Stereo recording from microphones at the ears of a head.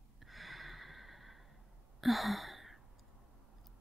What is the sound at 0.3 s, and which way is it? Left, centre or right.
Sigh, centre.